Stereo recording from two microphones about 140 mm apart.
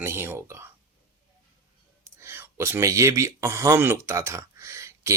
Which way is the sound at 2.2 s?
15° right (ahead or behind).